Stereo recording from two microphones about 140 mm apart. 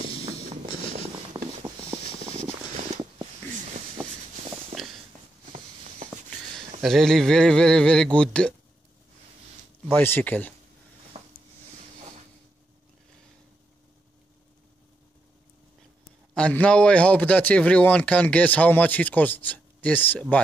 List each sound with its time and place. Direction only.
1.3 s a sound: 30° right (ahead or behind)
4.8 s walk: centre (ahead or behind)
6.8 s speech: centre (ahead or behind)
9.8 s speech: 15° left (ahead or behind)
11.1 s a sound: 50° right (ahead or behind)
16.3 s speech: 10° left (ahead or behind)